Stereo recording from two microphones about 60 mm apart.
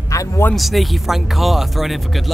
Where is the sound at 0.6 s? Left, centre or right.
Centre.